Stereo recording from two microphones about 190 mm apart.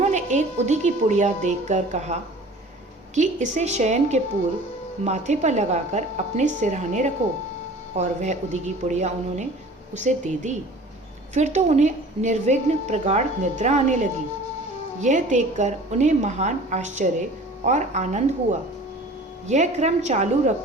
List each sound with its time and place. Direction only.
0.0 s a woman's voice: 40° right (ahead or behind)
3.2 s a woman's voice: 40° right (ahead or behind)
19.5 s a woman's voice: 40° right (ahead or behind)